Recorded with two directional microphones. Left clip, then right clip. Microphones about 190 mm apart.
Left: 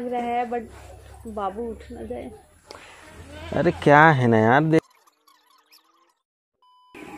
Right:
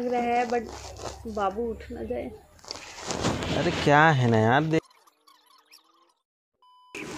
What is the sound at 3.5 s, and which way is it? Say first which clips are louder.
Speech: left 6 dB; 40° left (ahead or behind).